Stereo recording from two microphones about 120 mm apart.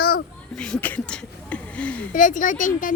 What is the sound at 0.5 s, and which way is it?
Speech, 5° left (ahead or behind).